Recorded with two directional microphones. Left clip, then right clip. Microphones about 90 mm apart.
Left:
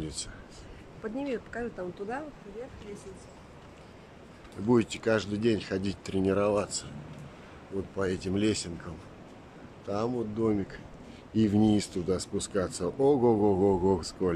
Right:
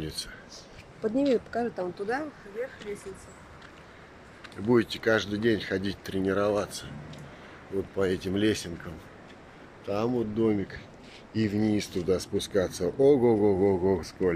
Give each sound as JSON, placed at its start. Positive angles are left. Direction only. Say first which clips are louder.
{"t": 0.0, "sound": "speech", "louder": "right 3 dB", "side_deg": 5}
{"t": 1.0, "sound": "speech", "louder": "right 9 dB", "side_deg": -45}
{"t": 1.5, "sound": "speech", "louder": "right 6 dB", "side_deg": -30}
{"t": 4.6, "sound": "speech", "louder": "right 2 dB", "side_deg": 15}
{"t": 7.9, "sound": "speech", "louder": "right 3 dB", "side_deg": -5}
{"t": 9.8, "sound": "speech", "louder": "right 3 dB", "side_deg": -5}
{"t": 11.3, "sound": "speech", "louder": "left 2 dB", "side_deg": 30}
{"t": 11.7, "sound": "speech", "louder": "right 2 dB", "side_deg": 15}